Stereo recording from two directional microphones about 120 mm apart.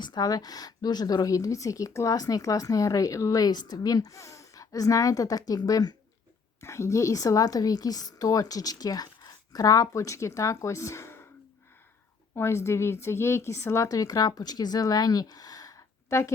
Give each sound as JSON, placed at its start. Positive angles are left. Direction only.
{"t": 0.0, "sound": "speech", "side_deg": 35}
{"t": 12.3, "sound": "speech", "side_deg": 20}